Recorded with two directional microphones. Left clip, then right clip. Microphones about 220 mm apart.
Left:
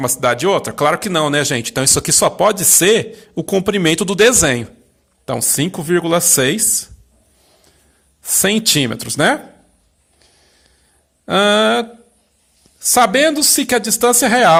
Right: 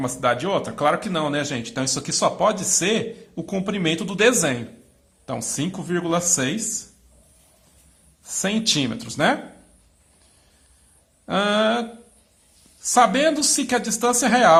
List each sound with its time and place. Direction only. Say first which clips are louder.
0.0 s speech: left 6 dB; 40° left (ahead or behind)
8.2 s speech: left 8 dB; 40° left (ahead or behind)
11.3 s speech: left 7 dB; 35° left (ahead or behind)